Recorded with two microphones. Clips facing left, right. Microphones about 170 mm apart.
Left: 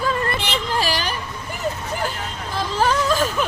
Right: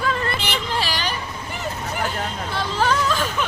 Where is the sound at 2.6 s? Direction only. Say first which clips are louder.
Left 2 dB; 40° left (ahead or behind).